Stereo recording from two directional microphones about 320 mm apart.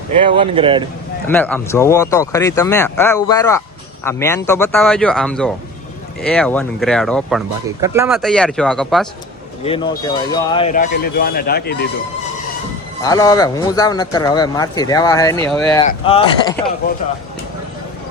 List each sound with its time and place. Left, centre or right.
0.2 s speech: centre
1.3 s speech: centre
9.6 s speech: centre
13.0 s speech: centre
15.9 s speech: centre